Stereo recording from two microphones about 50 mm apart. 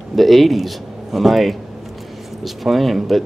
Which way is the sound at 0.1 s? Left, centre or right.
Centre.